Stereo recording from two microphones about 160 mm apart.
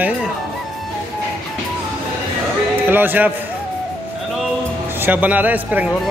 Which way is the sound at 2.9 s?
10° right (ahead or behind).